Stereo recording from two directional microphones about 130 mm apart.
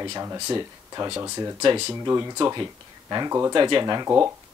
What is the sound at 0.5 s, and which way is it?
Speech, 30° right (ahead or behind).